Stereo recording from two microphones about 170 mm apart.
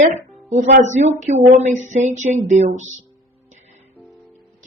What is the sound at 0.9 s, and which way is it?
Speech, 45° right (ahead or behind).